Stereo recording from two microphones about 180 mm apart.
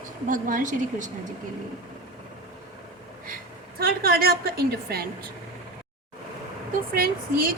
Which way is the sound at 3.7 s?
55° right (ahead or behind).